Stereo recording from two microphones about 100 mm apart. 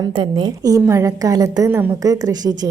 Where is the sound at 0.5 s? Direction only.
35° right (ahead or behind).